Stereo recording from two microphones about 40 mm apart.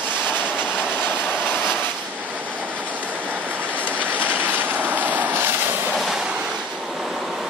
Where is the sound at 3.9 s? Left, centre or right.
Right.